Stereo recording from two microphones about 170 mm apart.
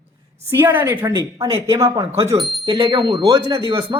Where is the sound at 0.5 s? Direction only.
10° right (ahead or behind).